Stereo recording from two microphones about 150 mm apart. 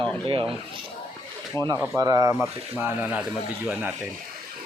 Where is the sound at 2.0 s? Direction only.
25° right (ahead or behind).